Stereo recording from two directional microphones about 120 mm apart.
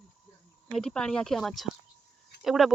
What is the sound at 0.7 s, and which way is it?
Speech, 5° left (ahead or behind).